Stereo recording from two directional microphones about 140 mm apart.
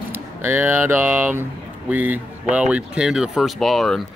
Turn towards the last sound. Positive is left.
turn(degrees=0)  # may be behind; listen again after turning